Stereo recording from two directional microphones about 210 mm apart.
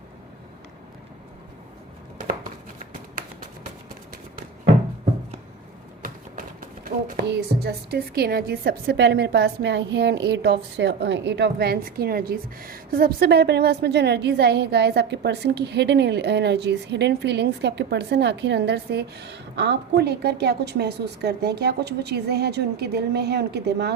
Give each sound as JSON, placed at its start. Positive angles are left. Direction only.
{"t": 6.8, "sound": "a woman's voice", "side_deg": -50}